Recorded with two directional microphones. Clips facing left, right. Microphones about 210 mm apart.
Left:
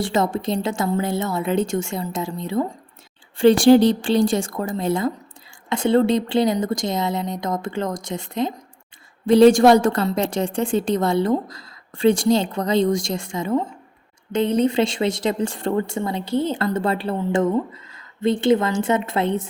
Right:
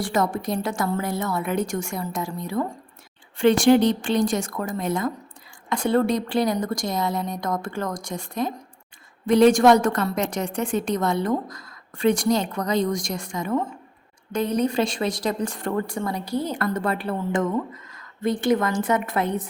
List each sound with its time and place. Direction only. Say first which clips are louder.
0.0 s a woman's voice: left 3 dB; 25° left (ahead or behind)